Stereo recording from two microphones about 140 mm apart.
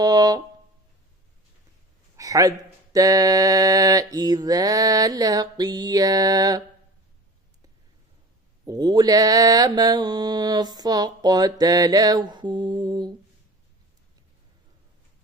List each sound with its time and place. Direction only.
0.0 s mantra: 25° right (ahead or behind)
2.1 s a sound: 25° right (ahead or behind)
2.9 s mantra: 25° right (ahead or behind)
8.6 s mantra: 30° right (ahead or behind)